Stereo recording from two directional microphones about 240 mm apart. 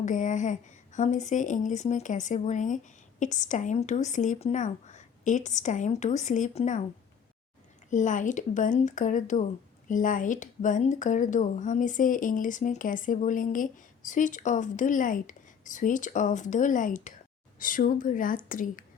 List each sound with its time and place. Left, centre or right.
0.0 s a woman's voice: left
7.9 s a woman's voice: left